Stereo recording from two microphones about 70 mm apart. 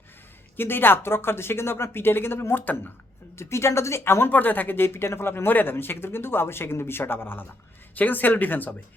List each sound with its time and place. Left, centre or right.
0.5 s speech: left
3.3 s speech: left